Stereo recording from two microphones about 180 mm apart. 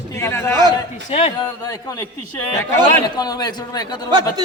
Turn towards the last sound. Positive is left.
turn(degrees=-25)  # may be behind; listen again after turning